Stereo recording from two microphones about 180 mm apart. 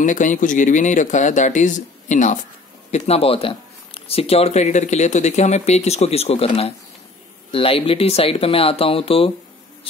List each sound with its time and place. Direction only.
0.0 s speech: 45° left (ahead or behind)